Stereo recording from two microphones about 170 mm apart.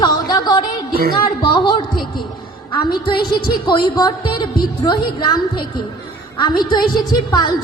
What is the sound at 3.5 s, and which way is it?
Speech, 25° left (ahead or behind).